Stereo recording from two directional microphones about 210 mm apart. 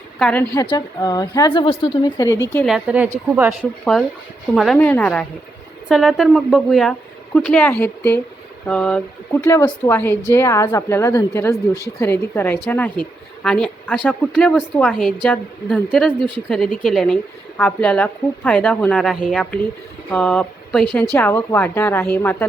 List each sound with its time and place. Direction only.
0.2 s a woman's voice: 5° left (ahead or behind)
0.5 s a woman's voice: 15° left (ahead or behind)
2.6 s a woman's voice: 5° right (ahead or behind)